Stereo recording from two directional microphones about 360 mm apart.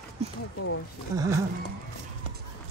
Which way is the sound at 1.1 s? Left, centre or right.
Centre.